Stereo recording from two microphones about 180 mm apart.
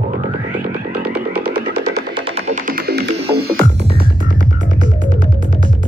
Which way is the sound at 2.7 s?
55° right (ahead or behind).